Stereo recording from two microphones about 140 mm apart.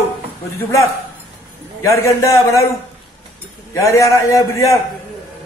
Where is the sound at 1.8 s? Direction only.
20° left (ahead or behind).